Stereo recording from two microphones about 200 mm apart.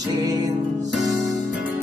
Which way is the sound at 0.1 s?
20° right (ahead or behind).